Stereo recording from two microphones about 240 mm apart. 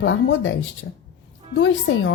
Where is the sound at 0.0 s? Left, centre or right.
Left.